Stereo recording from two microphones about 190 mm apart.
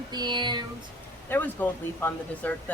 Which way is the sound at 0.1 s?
25° right (ahead or behind).